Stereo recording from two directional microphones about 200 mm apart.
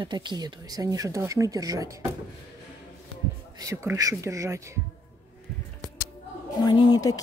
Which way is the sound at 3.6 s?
15° right (ahead or behind).